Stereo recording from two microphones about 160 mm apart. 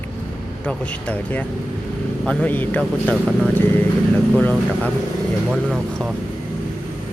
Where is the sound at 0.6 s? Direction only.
10° left (ahead or behind).